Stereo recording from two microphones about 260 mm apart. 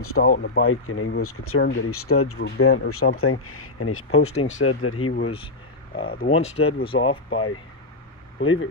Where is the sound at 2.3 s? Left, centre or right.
Left.